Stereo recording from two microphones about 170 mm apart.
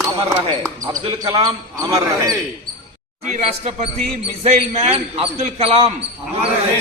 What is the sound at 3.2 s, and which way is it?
Speech, 40° right (ahead or behind).